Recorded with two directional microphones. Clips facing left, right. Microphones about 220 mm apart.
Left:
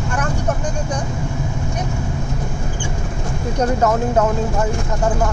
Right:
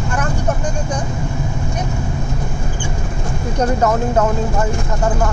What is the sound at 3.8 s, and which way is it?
Speech, 10° left (ahead or behind).